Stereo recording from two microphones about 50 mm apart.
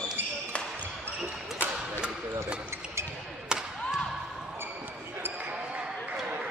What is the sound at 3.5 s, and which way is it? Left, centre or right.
Thump, centre.